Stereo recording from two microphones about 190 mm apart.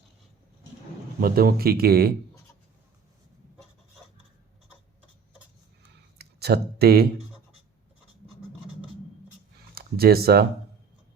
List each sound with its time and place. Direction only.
1.2 s speech: 50° right (ahead or behind)
6.1 s speech: 55° right (ahead or behind)
9.7 s speech: 55° right (ahead or behind)